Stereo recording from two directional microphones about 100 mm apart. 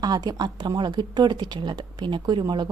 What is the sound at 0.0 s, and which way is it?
Speech, 40° right (ahead or behind).